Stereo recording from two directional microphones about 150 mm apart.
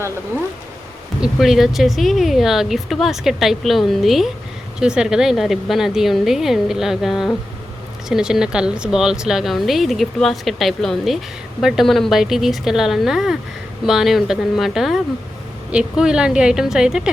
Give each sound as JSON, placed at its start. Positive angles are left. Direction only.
{"t": 1.2, "sound": "speech", "side_deg": 0}